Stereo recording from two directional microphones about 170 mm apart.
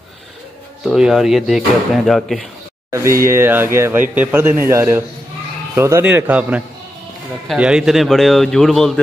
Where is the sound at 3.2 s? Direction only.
15° right (ahead or behind).